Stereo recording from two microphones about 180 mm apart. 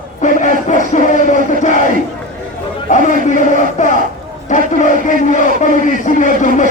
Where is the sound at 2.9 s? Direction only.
45° left (ahead or behind).